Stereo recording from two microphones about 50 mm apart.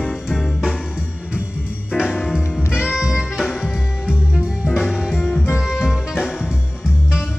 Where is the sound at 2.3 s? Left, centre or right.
Centre.